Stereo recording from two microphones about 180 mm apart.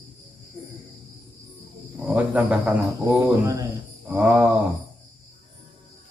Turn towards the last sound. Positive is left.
turn(degrees=-10)  # may be behind; listen again after turning